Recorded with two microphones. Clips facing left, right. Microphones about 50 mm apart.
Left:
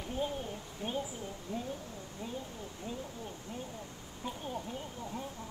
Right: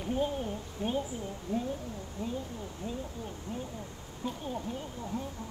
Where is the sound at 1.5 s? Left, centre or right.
Left.